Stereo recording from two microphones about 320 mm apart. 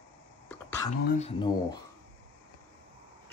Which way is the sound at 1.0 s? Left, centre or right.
Left.